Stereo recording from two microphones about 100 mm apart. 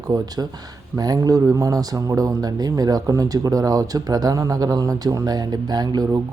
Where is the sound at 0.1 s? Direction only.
40° right (ahead or behind).